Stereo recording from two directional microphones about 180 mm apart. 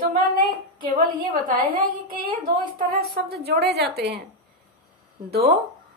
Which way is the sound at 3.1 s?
65° right (ahead or behind).